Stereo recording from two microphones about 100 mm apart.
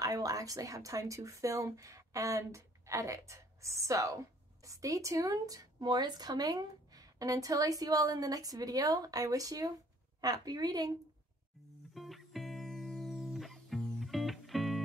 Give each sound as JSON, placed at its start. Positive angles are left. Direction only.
{"t": 0.0, "sound": "a woman's voice", "side_deg": -35}
{"t": 11.9, "sound": "music", "side_deg": 0}